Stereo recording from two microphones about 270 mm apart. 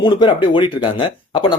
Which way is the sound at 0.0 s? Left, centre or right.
Centre.